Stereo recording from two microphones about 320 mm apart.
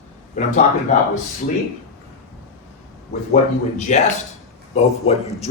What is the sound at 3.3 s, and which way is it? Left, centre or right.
Speech, left.